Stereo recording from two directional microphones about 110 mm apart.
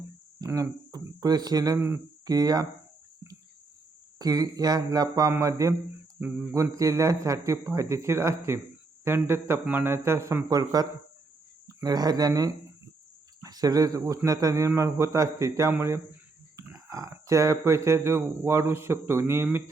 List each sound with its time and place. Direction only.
0.4 s speech: 30° right (ahead or behind)
4.2 s speech: 35° right (ahead or behind)
6.1 s speech: 15° right (ahead or behind)
6.5 s speech: 30° right (ahead or behind)